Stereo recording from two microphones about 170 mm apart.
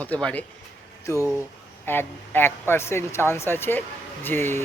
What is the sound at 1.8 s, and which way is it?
Speech, 10° left (ahead or behind).